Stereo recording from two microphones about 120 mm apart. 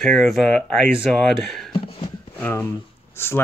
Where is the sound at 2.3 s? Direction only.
15° left (ahead or behind).